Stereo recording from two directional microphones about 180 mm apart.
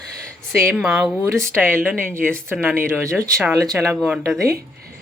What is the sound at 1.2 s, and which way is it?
Speech, 15° right (ahead or behind).